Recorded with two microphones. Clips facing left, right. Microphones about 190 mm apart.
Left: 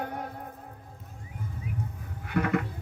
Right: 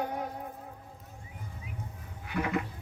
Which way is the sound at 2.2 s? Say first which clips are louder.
Left 4 dB; 55° left (ahead or behind).